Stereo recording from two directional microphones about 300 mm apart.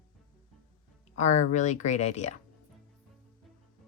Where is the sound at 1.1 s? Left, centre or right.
Left.